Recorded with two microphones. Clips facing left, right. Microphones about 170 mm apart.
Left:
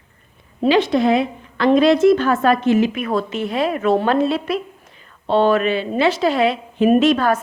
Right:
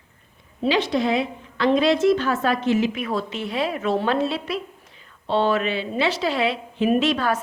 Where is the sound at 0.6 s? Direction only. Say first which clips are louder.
Left 6 dB; 55° left (ahead or behind).